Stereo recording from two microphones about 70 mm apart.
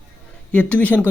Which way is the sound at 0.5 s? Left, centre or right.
Left.